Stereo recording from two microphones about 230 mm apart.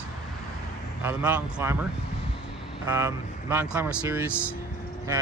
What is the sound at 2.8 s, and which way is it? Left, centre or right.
Speech, centre.